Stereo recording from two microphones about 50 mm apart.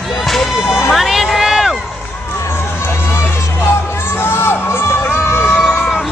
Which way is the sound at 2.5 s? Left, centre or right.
Left.